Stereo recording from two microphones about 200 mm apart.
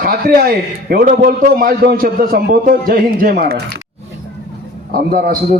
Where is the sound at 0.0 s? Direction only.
50° right (ahead or behind).